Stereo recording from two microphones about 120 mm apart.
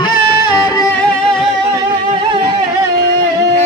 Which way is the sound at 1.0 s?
5° left (ahead or behind).